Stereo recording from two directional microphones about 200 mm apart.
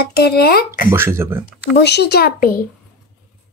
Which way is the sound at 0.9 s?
10° right (ahead or behind).